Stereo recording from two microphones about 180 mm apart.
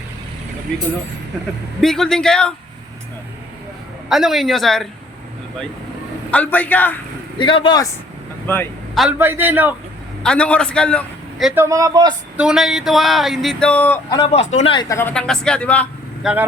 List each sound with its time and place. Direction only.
1.8 s speech: centre (ahead or behind)
4.1 s speech: centre (ahead or behind)
6.3 s speech: 10° left (ahead or behind)
7.3 s speech: 25° left (ahead or behind)
9.0 s a man's voice: 10° right (ahead or behind)
10.2 s speech: 5° left (ahead or behind)
11.5 s a man's voice: 15° right (ahead or behind)
12.4 s speech: 5° right (ahead or behind)
14.1 s speech: 25° left (ahead or behind)
15.1 s speech: 5° left (ahead or behind)
16.2 s a man's voice: 10° right (ahead or behind)